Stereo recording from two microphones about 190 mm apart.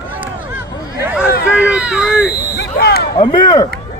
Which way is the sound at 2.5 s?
55° left (ahead or behind).